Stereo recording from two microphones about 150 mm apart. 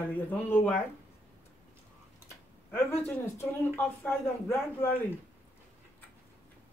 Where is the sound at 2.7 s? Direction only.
15° left (ahead or behind).